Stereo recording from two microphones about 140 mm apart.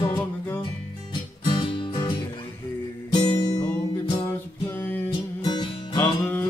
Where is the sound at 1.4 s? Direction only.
35° left (ahead or behind).